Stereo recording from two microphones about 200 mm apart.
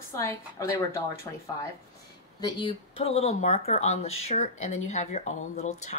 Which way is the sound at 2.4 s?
20° left (ahead or behind).